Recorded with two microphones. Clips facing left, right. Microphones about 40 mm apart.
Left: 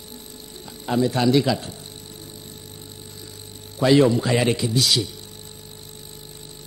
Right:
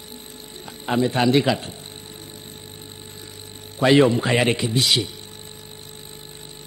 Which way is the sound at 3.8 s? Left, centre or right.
Right.